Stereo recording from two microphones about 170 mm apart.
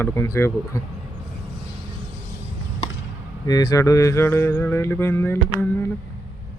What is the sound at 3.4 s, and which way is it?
Mantra, 20° left (ahead or behind).